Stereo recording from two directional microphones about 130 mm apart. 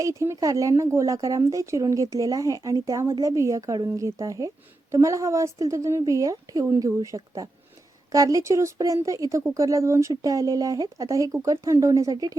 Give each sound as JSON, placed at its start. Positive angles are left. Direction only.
{"t": 0.0, "sound": "a woman's voice", "side_deg": -25}